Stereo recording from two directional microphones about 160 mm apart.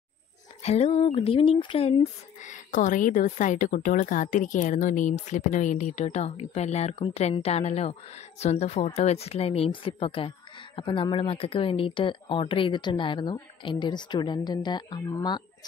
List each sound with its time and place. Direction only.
0.6 s speech: 40° left (ahead or behind)